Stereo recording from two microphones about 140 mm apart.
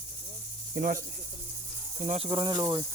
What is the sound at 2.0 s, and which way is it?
Speech, 55° right (ahead or behind).